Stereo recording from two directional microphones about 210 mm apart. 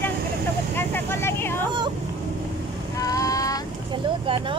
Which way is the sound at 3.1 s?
15° left (ahead or behind).